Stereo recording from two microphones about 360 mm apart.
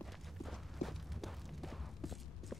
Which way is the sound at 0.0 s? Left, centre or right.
Centre.